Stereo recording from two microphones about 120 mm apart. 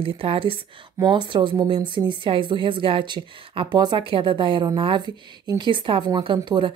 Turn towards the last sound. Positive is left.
turn(degrees=-40)  # may be behind; listen again after turning